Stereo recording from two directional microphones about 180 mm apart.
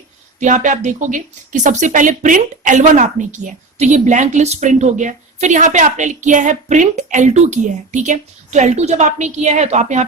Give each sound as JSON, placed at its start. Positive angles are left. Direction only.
{"t": 0.3, "sound": "a woman's voice", "side_deg": -45}